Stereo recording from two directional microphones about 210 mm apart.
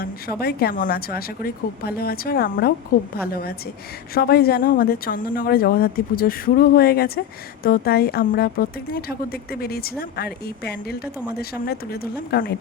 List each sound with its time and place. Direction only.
0.3 s a woman's voice: 45° left (ahead or behind)